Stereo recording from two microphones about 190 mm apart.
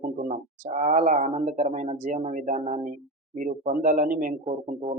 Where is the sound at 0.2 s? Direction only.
45° right (ahead or behind).